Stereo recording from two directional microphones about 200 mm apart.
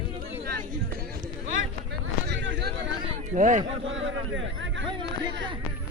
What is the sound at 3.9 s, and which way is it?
Speech, 70° right (ahead or behind).